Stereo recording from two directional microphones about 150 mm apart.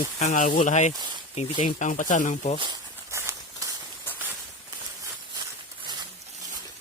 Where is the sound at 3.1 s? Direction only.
20° right (ahead or behind).